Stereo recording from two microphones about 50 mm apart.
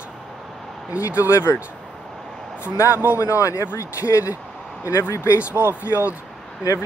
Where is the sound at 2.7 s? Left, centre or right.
Left.